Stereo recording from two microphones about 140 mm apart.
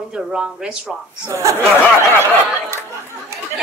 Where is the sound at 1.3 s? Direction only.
20° right (ahead or behind).